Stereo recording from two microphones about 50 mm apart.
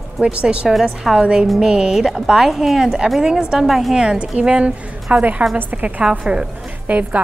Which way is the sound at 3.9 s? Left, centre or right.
Centre.